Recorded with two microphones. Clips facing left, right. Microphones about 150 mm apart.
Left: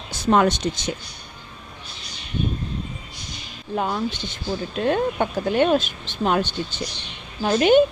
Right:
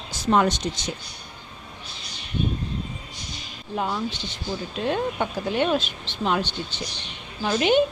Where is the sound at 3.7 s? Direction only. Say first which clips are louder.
Left 3 dB; 55° left (ahead or behind).